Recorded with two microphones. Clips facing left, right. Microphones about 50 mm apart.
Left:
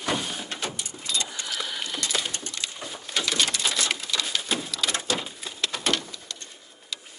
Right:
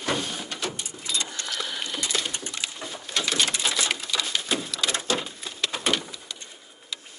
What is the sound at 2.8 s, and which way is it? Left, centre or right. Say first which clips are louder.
Bird: even; centre.